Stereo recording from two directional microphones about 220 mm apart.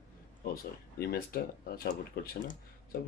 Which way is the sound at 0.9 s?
45° left (ahead or behind).